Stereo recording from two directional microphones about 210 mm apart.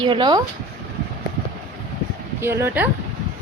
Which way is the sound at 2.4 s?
10° right (ahead or behind).